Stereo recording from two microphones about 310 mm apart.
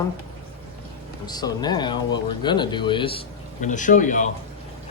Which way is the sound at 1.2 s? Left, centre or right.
Centre.